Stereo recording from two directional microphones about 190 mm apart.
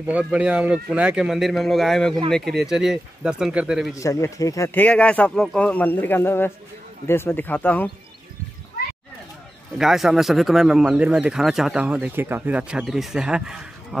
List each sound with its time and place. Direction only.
0.0 s speech: 5° right (ahead or behind)
3.9 s speech: 15° left (ahead or behind)
9.8 s speech: centre (ahead or behind)